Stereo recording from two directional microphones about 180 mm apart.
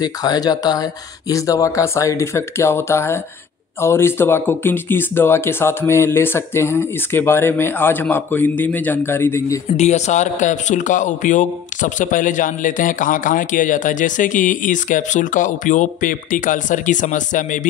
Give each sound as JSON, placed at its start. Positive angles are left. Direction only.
{"t": 0.0, "sound": "speech", "side_deg": 20}
{"t": 9.8, "sound": "a man's voice", "side_deg": 40}